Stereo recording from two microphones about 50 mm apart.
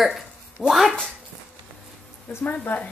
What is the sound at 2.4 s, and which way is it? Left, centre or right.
Speech, left.